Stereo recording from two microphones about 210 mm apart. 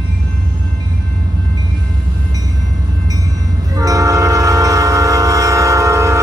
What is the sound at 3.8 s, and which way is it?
Train, 15° right (ahead or behind).